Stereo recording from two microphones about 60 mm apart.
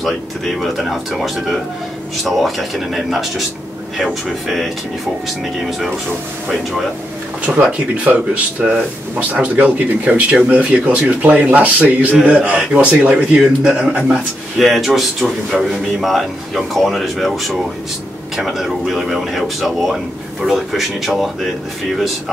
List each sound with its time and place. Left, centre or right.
0.6 s a man's voice: centre
6.5 s a man's voice: centre
7.5 s a man's voice: centre
8.1 s speech: right
13.4 s a man's voice: centre
13.7 s speech: right
14.6 s a man's voice: centre